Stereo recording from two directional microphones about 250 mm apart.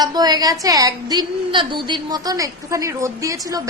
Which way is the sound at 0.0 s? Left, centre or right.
Centre.